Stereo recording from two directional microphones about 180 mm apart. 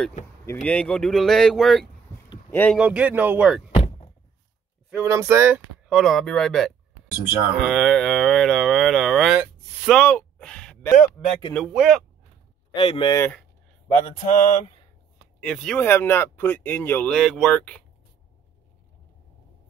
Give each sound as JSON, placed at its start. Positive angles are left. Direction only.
{"t": 0.5, "sound": "mantra", "side_deg": 5}
{"t": 2.5, "sound": "speech", "side_deg": 10}
{"t": 2.8, "sound": "speech", "side_deg": -5}
{"t": 3.7, "sound": "thunk", "side_deg": 30}
{"t": 5.0, "sound": "mantra", "side_deg": -15}
{"t": 9.4, "sound": "a sound", "side_deg": -5}
{"t": 9.9, "sound": "a sound", "side_deg": 5}
{"t": 11.1, "sound": "mantra", "side_deg": 30}
{"t": 11.5, "sound": "mantra", "side_deg": 0}
{"t": 12.7, "sound": "speech", "side_deg": 30}
{"t": 13.8, "sound": "mantra", "side_deg": 25}
{"t": 15.4, "sound": "speech", "side_deg": 5}